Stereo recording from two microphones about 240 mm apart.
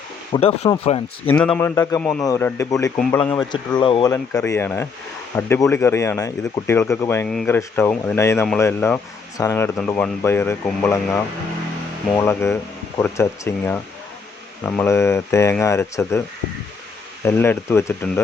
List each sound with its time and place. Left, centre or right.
0.3 s speech: left
1.3 s speech: centre
3.8 s speech: centre
17.2 s speech: centre